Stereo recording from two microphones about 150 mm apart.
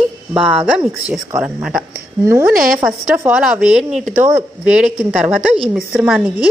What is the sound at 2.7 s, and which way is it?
A woman's voice, 5° right (ahead or behind).